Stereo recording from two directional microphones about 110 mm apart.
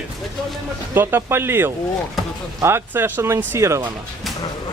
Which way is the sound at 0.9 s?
20° right (ahead or behind).